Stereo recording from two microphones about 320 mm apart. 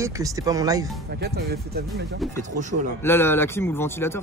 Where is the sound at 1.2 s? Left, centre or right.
Right.